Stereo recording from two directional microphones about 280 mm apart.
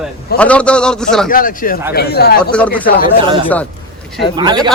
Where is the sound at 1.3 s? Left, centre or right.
Left.